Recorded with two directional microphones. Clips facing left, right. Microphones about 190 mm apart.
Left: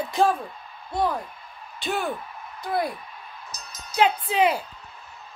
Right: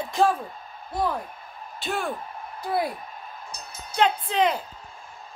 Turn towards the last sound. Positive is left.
turn(degrees=10)  # may be behind; listen again after turning